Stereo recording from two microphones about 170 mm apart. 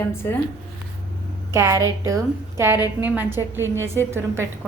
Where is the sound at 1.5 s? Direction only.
15° right (ahead or behind).